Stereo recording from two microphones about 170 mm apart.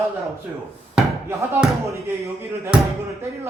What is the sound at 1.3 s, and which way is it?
Speech, 15° right (ahead or behind).